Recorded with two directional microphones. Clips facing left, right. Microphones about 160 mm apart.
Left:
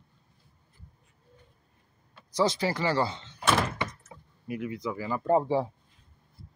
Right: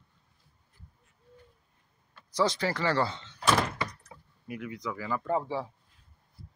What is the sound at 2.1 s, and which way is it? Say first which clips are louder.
Speech: left 2 dB; 15° left (ahead or behind).